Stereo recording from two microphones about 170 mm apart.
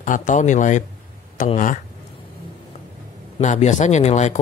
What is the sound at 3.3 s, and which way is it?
Speech, 45° left (ahead or behind).